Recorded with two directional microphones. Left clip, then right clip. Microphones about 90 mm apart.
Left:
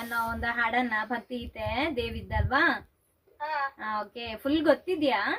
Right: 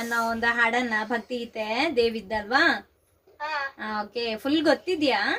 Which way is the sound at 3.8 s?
30° right (ahead or behind).